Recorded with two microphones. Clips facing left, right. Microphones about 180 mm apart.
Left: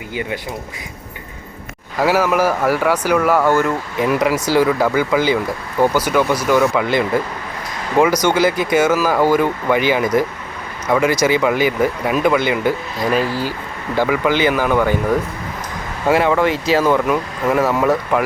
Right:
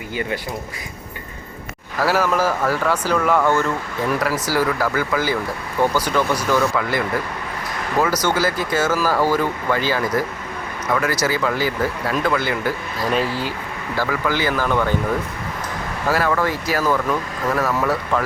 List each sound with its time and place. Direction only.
0.1 s speech: 15° left (ahead or behind)
2.0 s speech: 15° left (ahead or behind)
13.1 s speech: centre (ahead or behind)
13.9 s speech: 20° left (ahead or behind)
16.0 s speech: 20° left (ahead or behind)